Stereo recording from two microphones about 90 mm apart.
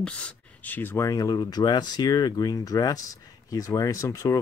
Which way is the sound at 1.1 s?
40° left (ahead or behind).